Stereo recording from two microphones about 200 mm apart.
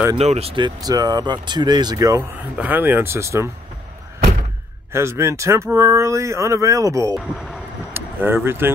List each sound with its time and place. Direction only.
0.1 s speech: 30° right (ahead or behind); by 3.4 s 15° right (ahead or behind)
4.9 s speech: 15° right (ahead or behind)
7.2 s speech: centre (ahead or behind)
7.9 s speech: 10° right (ahead or behind)